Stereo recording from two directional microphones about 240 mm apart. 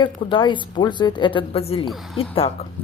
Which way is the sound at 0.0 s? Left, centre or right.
Centre.